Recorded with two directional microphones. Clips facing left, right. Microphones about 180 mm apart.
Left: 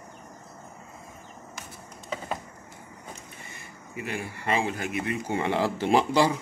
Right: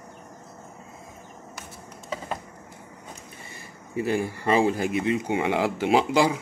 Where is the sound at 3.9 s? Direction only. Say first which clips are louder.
Right 9 dB; 35° right (ahead or behind); by 6.3 s 10° right (ahead or behind).